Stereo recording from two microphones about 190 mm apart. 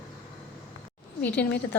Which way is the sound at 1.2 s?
10° left (ahead or behind).